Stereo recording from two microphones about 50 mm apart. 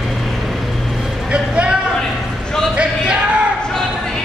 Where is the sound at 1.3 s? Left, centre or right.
Right.